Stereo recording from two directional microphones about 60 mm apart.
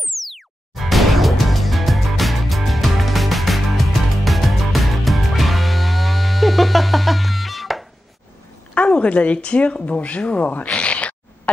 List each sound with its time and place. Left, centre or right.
0.1 s music: centre
8.7 s speech: left